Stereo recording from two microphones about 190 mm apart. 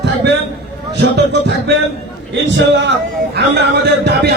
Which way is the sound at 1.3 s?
60° right (ahead or behind).